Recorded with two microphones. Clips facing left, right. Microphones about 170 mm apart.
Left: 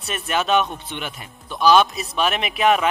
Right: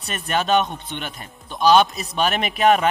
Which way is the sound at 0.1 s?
40° right (ahead or behind).